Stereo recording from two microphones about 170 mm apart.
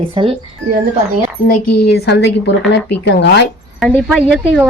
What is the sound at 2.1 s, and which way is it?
Speech, 90° left.